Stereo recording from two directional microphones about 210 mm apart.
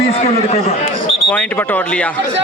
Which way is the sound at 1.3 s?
5° left (ahead or behind).